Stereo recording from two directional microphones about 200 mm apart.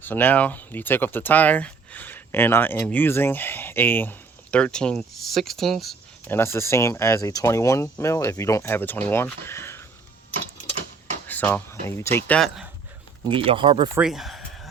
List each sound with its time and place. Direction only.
0.0 s speech: 10° left (ahead or behind)
11.3 s speech: 10° left (ahead or behind)
13.3 s speech: 25° right (ahead or behind)
14.0 s speech: centre (ahead or behind)